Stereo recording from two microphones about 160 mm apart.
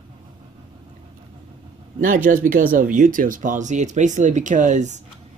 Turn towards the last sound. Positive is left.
turn(degrees=-50)  # may be behind; listen again after turning